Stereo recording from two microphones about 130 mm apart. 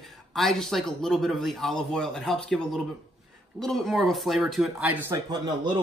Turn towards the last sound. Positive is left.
turn(degrees=-35)  # may be behind; listen again after turning